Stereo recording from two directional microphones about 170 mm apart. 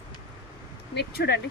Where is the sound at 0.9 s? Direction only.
75° left (ahead or behind).